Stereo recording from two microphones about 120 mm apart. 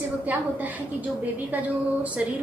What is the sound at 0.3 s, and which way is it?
Speech, 15° right (ahead or behind).